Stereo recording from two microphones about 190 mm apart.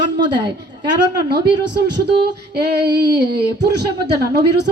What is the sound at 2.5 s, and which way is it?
Speech, 55° right (ahead or behind).